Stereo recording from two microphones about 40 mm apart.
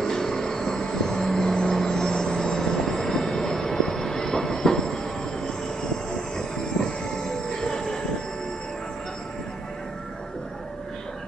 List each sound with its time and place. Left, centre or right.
0.0 s vehicle: centre
6.3 s train: centre